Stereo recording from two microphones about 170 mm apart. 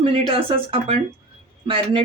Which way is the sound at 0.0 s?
35° right (ahead or behind).